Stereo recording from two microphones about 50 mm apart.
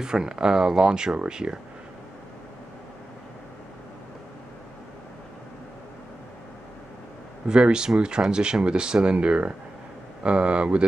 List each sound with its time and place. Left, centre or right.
0.0 s speech: centre
7.4 s speech: centre